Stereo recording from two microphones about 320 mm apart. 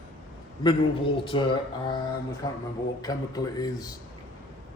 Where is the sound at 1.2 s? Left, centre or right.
Centre.